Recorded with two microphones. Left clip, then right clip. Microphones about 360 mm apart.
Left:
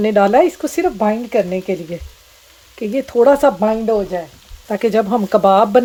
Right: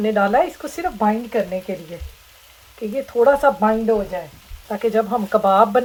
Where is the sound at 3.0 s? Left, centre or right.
Left.